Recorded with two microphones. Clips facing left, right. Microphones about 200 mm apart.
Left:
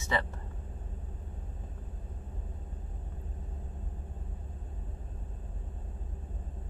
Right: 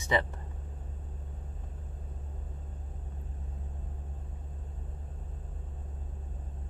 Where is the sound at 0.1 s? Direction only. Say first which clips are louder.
Right 3 dB; 15° right (ahead or behind).